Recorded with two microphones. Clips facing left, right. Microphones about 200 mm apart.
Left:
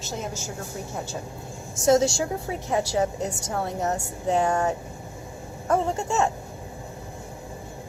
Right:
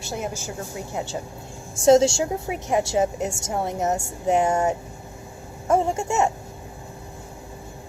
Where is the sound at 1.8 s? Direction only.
25° right (ahead or behind).